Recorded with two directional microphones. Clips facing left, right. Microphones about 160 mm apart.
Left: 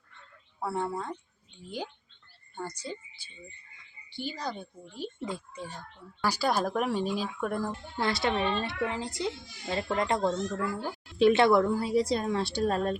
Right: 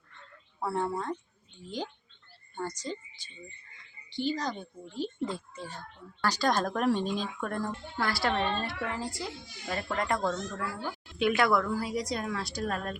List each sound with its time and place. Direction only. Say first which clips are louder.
0.6 s speech: right 1 dB; centre (ahead or behind)
2.6 s speech: right 2 dB; 10° left (ahead or behind)
7.9 s a child's voice: left 1 dB; 20° left (ahead or behind)